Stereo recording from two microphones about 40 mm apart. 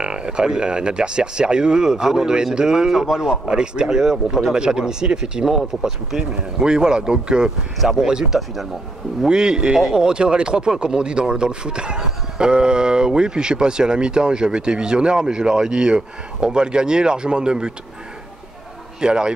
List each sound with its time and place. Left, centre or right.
0.0 s speech: right
7.8 s speech: centre
8.1 s speech: centre
18.9 s speech: right